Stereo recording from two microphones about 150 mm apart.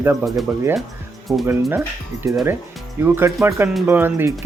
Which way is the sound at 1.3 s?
Centre (ahead or behind).